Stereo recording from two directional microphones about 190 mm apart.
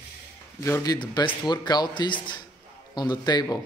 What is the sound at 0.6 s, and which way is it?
A man's voice, 20° left (ahead or behind).